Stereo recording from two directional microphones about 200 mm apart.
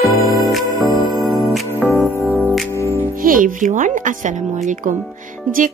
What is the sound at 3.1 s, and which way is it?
Speech, 45° right (ahead or behind).